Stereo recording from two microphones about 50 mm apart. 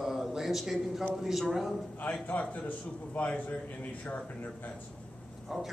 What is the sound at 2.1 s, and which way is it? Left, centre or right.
A man's voice, left.